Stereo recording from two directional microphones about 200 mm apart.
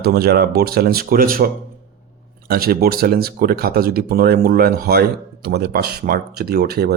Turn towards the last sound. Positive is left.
turn(degrees=-50)  # may be behind; listen again after turning